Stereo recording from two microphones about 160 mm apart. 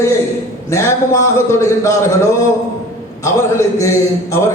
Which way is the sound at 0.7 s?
20° left (ahead or behind).